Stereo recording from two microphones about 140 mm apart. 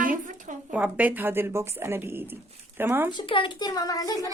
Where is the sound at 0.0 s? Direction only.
75° right (ahead or behind).